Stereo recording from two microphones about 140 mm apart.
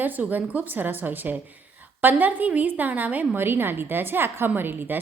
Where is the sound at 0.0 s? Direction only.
10° right (ahead or behind).